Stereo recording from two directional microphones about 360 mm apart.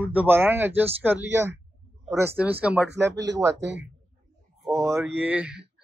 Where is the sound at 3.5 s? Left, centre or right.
Right.